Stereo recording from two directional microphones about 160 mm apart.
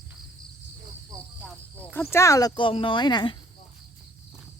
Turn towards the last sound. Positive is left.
turn(degrees=30)  # may be behind; listen again after turning